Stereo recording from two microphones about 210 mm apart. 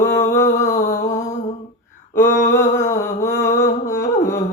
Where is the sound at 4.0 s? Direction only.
15° left (ahead or behind).